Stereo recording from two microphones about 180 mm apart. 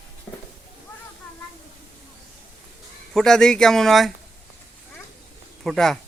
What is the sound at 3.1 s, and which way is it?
Speech, 5° left (ahead or behind).